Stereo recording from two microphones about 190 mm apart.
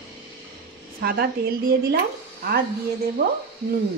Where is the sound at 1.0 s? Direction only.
55° right (ahead or behind).